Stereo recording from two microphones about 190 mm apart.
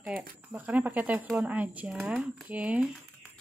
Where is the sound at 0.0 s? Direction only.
5° right (ahead or behind).